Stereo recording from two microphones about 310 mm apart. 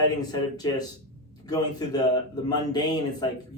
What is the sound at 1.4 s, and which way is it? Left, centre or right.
Speech, centre.